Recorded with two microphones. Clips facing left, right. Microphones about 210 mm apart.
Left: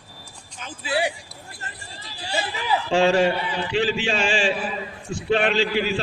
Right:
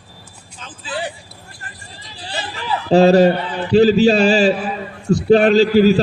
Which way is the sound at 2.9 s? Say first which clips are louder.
Right 9 dB; 40° right (ahead or behind).